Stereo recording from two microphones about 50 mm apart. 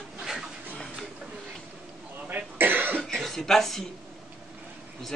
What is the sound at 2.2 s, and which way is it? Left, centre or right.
Cough, right.